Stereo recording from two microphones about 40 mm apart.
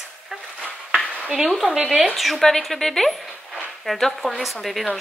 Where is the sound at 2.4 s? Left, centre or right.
Centre.